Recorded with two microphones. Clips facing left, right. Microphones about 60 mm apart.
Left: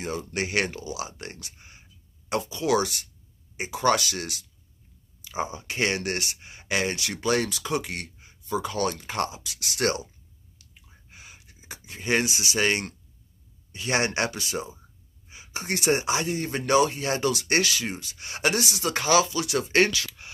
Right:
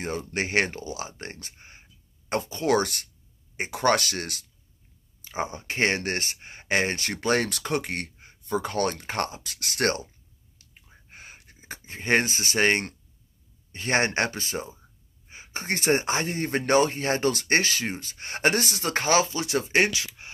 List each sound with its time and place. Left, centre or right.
0.0 s speech: right
11.1 s a sound: right
13.7 s speech: right
19.7 s speech: right